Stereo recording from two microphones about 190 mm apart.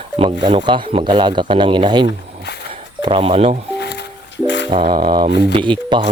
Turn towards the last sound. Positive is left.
turn(degrees=-25)  # may be behind; listen again after turning